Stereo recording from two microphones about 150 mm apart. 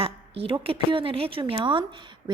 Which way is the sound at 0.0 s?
40° right (ahead or behind).